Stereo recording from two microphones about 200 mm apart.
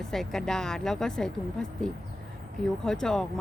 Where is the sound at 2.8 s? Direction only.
5° left (ahead or behind).